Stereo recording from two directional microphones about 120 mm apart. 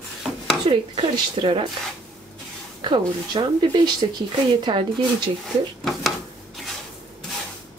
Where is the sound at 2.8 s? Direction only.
40° right (ahead or behind).